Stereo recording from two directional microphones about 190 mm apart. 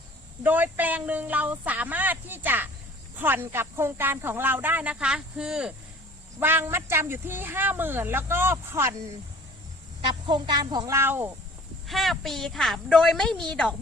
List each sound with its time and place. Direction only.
0.4 s speech: 10° right (ahead or behind)
10.1 s speech: 25° right (ahead or behind)
11.9 s a woman's voice: centre (ahead or behind)